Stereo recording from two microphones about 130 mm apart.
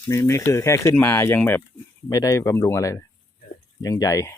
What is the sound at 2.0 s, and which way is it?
Speech, 25° left (ahead or behind).